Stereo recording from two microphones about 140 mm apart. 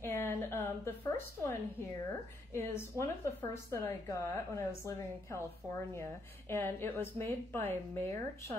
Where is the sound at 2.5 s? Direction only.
20° left (ahead or behind).